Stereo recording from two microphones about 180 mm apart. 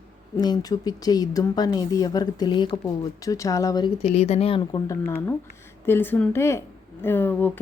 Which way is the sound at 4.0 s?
35° left (ahead or behind).